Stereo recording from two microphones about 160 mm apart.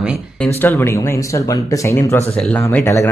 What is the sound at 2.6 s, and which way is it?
Speech, 20° left (ahead or behind).